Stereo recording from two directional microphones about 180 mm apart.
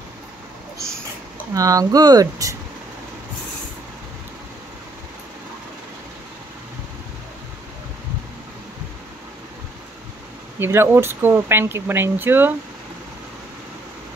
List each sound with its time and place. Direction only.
1.5 s speech: 20° right (ahead or behind)
10.6 s speech: 15° right (ahead or behind)